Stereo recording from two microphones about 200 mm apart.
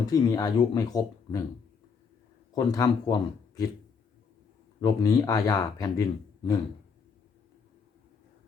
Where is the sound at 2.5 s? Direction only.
20° left (ahead or behind).